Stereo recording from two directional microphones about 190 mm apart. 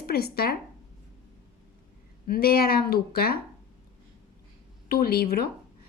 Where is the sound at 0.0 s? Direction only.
55° left (ahead or behind).